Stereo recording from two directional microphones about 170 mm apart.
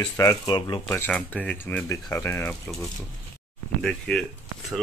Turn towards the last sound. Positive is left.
turn(degrees=0)  # may be behind; listen again after turning